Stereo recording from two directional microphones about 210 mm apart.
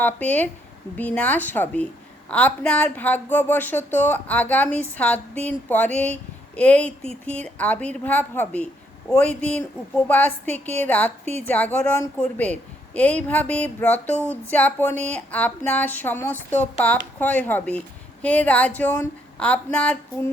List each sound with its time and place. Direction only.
0.0 s speech: 5° left (ahead or behind)